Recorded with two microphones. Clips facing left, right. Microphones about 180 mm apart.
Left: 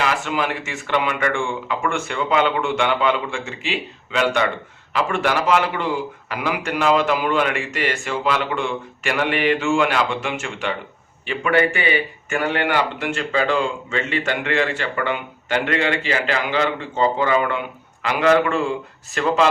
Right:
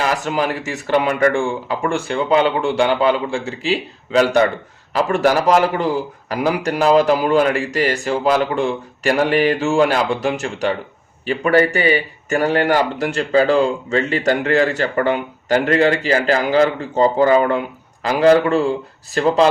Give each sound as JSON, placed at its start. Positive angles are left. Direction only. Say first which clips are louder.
{"t": 0.0, "sound": "speech", "louder": "right 3 dB", "side_deg": -40}